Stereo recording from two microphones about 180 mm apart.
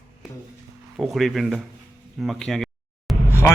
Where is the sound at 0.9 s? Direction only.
5° right (ahead or behind).